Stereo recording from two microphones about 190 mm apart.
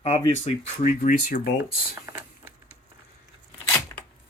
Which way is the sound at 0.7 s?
50° left (ahead or behind).